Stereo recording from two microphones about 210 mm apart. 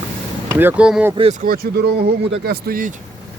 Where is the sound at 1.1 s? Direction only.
30° right (ahead or behind).